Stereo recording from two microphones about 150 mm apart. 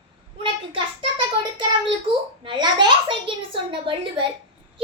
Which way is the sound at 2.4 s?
30° right (ahead or behind).